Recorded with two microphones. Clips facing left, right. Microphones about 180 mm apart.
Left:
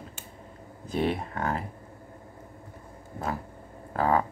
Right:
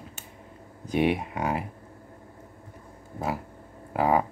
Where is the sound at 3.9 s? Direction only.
10° right (ahead or behind).